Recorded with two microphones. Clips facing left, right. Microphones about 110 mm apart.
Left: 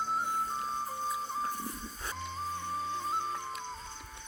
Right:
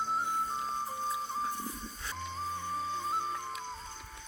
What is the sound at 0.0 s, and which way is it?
Music, centre (ahead or behind).